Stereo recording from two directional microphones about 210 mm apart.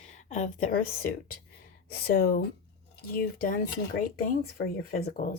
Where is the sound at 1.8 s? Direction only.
45° left (ahead or behind).